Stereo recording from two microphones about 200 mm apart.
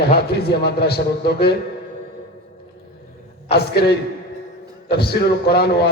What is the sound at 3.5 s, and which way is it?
A man's voice, 55° left (ahead or behind).